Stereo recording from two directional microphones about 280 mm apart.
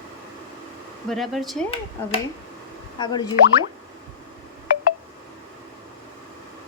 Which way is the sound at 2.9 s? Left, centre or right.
Centre.